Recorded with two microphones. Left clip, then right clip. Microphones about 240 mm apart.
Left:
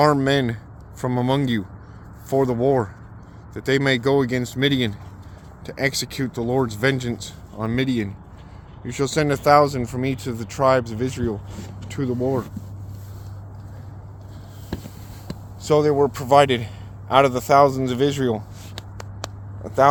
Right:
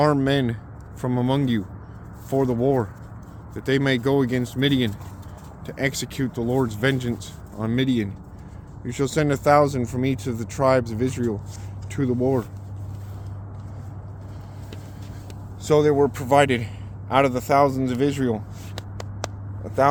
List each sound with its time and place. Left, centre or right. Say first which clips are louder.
0.0 s speech: left 3 dB; left
15.6 s speech: even; centre
18.8 s a sound: right 2 dB; centre
19.6 s speech: left 3 dB; left